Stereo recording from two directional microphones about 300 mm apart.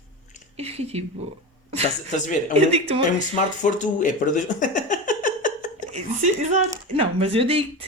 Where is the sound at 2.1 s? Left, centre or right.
Left.